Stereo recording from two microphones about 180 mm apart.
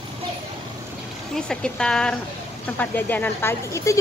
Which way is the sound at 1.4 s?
5° left (ahead or behind).